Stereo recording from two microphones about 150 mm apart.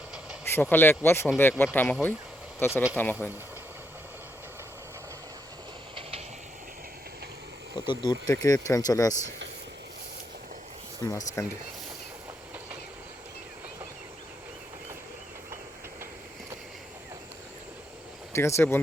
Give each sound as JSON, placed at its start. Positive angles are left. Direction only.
{"t": 0.4, "sound": "speech", "side_deg": 15}
{"t": 5.9, "sound": "train", "side_deg": -40}
{"t": 7.9, "sound": "speech", "side_deg": 30}
{"t": 11.4, "sound": "speech", "side_deg": 20}
{"t": 18.3, "sound": "speech", "side_deg": 15}